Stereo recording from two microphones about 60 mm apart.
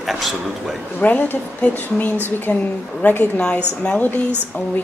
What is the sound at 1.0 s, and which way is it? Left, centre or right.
Speech, left.